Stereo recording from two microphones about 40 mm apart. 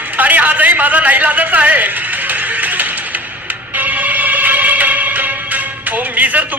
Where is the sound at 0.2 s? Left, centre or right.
Right.